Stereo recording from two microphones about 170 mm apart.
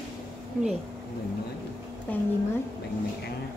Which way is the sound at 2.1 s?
10° left (ahead or behind).